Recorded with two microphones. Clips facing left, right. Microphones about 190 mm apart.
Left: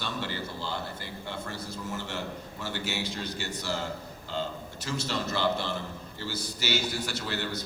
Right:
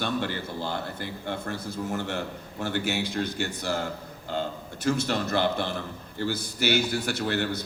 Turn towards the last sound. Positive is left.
turn(degrees=-55)  # may be behind; listen again after turning